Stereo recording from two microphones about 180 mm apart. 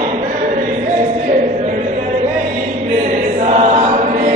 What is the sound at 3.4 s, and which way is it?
Chant, 40° right (ahead or behind).